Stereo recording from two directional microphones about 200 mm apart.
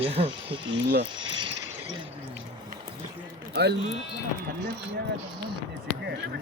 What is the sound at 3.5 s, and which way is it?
Speech, 55° right (ahead or behind).